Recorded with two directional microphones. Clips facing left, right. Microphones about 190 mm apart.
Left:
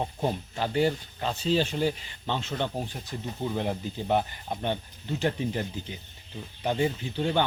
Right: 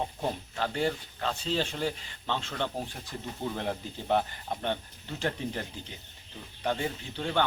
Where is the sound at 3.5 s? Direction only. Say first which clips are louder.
Left 4 dB; 10° left (ahead or behind).